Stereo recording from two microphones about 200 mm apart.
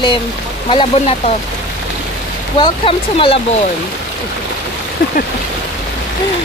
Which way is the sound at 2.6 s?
25° left (ahead or behind).